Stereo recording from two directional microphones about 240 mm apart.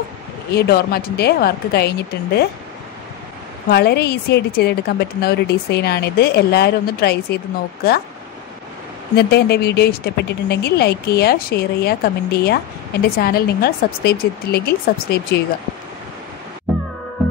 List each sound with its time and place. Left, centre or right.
0.6 s a woman's voice: left
3.7 s a woman's voice: left
9.1 s a woman's voice: left